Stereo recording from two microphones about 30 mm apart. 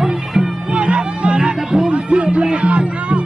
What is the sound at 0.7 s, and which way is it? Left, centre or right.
Music, right.